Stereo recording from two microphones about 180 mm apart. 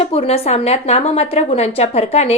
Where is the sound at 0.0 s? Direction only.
30° left (ahead or behind).